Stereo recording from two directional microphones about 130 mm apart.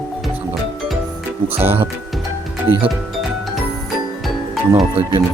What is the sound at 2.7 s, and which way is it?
Speech, 45° right (ahead or behind).